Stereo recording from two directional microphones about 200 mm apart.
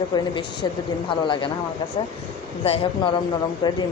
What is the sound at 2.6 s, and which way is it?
A woman's voice, 30° left (ahead or behind).